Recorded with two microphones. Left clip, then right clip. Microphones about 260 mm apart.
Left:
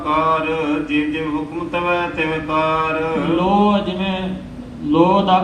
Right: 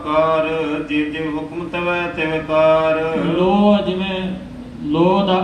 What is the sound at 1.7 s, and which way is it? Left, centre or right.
A man's voice, left.